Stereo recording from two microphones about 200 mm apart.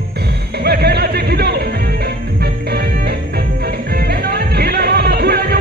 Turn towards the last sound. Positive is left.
turn(degrees=-50)  # may be behind; listen again after turning